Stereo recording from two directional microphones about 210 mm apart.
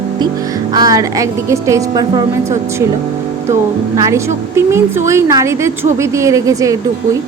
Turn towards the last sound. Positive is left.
turn(degrees=-15)  # may be behind; listen again after turning